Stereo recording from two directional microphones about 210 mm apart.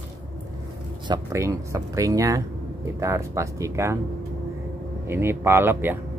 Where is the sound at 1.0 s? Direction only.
15° right (ahead or behind).